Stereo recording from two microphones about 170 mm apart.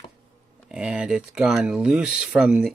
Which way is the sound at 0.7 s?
5° right (ahead or behind).